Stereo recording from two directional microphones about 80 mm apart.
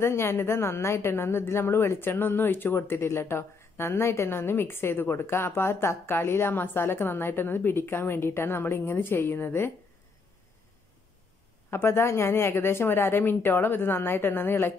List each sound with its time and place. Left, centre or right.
0.0 s a woman's voice: left
11.7 s a woman's voice: left